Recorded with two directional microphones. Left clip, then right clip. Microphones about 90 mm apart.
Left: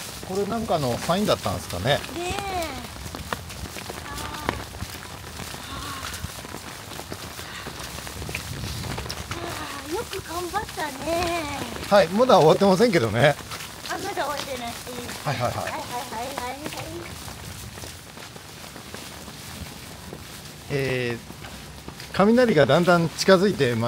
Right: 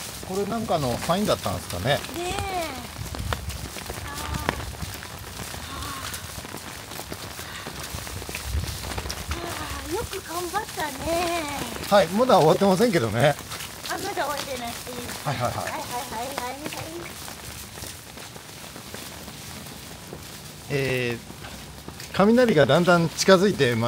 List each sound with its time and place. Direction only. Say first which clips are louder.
0.5 s speech: even; 10° left (ahead or behind)
4.1 s run: right 1 dB; 5° right (ahead or behind)
9.0 s a sound: even; centre (ahead or behind)
11.9 s speech: left 1 dB; 15° left (ahead or behind)
13.8 s speech: even; 5° right (ahead or behind)
20.7 s speech: even; 10° right (ahead or behind)